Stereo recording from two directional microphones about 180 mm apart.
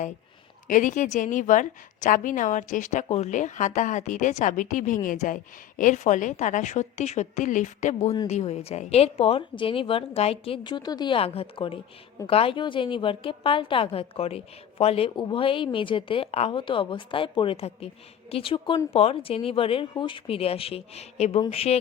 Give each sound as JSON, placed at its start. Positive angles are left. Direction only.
{"t": 0.7, "sound": "a woman's voice", "side_deg": 45}